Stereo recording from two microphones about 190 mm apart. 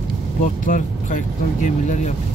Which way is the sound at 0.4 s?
45° left (ahead or behind).